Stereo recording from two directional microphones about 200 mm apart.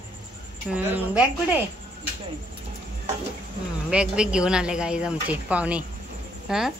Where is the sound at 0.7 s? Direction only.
10° right (ahead or behind).